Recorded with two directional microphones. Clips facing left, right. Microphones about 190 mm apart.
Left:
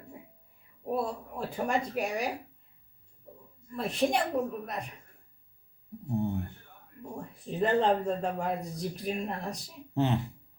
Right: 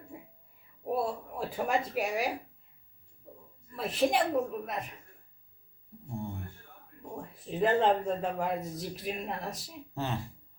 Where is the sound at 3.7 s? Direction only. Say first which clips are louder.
Even; centre (ahead or behind).